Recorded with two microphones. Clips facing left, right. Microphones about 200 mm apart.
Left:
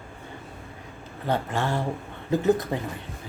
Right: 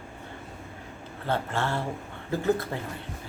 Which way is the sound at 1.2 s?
15° left (ahead or behind).